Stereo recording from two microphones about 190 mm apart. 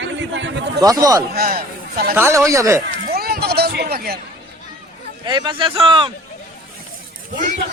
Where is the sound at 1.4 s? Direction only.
55° right (ahead or behind).